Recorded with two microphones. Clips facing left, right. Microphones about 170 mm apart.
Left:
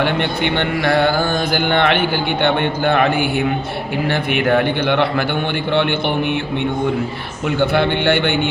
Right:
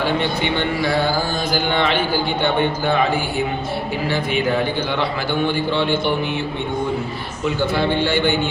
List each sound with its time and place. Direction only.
0.0 s a man's voice: 60° left (ahead or behind)
7.4 s a man's voice: 60° left (ahead or behind)